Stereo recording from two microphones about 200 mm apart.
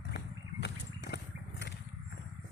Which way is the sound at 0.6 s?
55° left (ahead or behind).